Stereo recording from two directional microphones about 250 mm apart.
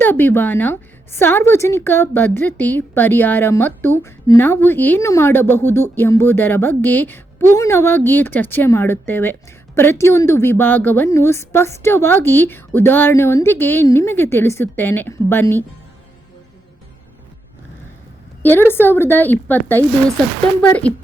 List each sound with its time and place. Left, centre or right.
0.0 s a woman's voice: centre
18.4 s a woman's voice: centre